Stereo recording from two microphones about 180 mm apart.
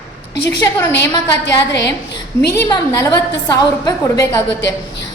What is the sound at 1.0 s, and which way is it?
Speech, 70° left (ahead or behind).